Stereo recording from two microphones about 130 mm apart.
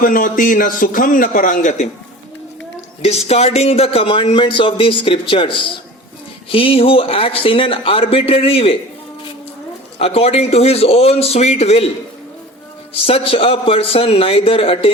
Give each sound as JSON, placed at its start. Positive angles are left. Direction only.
{"t": 0.0, "sound": "a man's voice", "side_deg": 90}
{"t": 3.0, "sound": "speech", "side_deg": 55}
{"t": 10.0, "sound": "speech", "side_deg": 50}
{"t": 12.9, "sound": "speech", "side_deg": 45}